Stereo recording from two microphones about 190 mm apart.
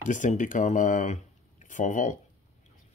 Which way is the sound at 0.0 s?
40° left (ahead or behind).